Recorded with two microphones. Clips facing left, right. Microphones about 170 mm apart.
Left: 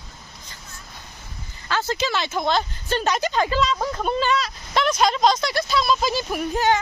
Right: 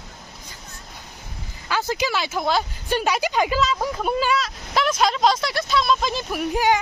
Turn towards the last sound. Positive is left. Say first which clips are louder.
# right 1 dB
turn(degrees=-10)  # may be behind; listen again after turning